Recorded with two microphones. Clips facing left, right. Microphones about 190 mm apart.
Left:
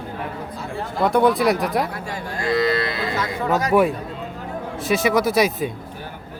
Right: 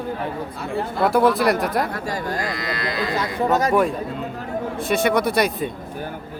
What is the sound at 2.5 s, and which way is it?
Cattle, 25° left (ahead or behind).